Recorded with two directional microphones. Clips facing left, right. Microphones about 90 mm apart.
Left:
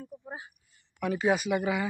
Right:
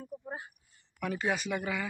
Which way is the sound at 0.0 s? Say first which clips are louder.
Right 1 dB; 10° right (ahead or behind).